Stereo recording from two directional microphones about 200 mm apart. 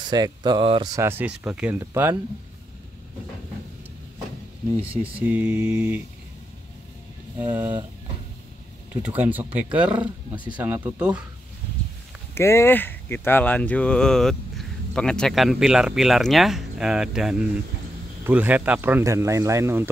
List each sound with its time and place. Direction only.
0.1 s speech: 20° right (ahead or behind)
0.9 s speech: 10° right (ahead or behind)
5.0 s speech: 10° right (ahead or behind)
9.0 s speech: 10° right (ahead or behind)
10.3 s speech: 25° right (ahead or behind)
10.6 s speech: 10° right (ahead or behind)
12.4 s speech: 15° left (ahead or behind); by 19.9 s 10° right (ahead or behind)